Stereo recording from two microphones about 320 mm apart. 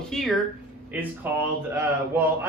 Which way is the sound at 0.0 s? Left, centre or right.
Centre.